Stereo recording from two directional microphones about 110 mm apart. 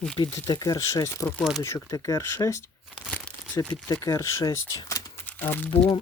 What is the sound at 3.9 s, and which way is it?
Speech, 30° left (ahead or behind).